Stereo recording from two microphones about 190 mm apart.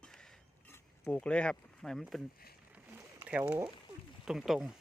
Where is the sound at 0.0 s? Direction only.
5° left (ahead or behind).